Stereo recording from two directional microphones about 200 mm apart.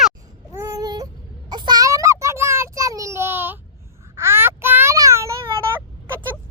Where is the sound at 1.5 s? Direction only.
20° right (ahead or behind).